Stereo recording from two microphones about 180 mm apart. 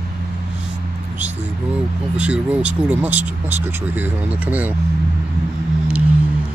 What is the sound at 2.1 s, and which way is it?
Speech, 5° right (ahead or behind).